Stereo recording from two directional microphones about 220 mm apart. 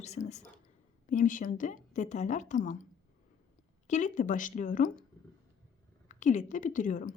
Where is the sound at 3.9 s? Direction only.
35° left (ahead or behind).